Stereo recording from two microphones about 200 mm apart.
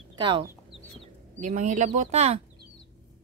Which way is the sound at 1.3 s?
40° right (ahead or behind).